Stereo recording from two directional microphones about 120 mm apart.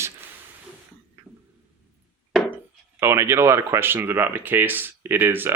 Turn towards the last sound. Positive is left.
turn(degrees=-15)  # may be behind; listen again after turning